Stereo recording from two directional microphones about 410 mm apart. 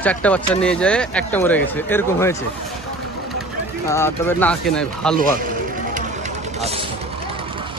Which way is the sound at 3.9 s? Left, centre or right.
Centre.